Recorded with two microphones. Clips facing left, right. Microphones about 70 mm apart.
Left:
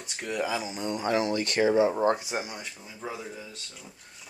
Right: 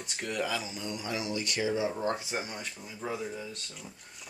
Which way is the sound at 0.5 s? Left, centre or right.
Centre.